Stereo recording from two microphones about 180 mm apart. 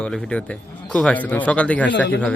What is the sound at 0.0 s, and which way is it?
A man's voice, 5° left (ahead or behind).